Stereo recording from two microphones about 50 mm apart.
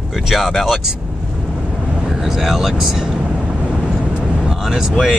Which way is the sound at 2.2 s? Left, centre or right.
Centre.